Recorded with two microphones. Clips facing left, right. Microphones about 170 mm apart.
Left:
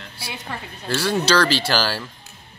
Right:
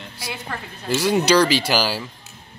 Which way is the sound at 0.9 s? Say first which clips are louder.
Right 3 dB; 10° right (ahead or behind).